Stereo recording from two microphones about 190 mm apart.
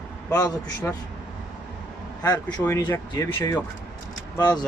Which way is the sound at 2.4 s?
10° left (ahead or behind).